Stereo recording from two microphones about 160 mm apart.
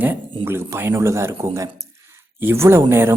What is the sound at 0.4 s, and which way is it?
Speech, 15° right (ahead or behind).